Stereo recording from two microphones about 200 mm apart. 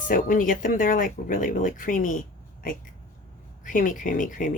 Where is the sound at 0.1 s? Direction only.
40° left (ahead or behind).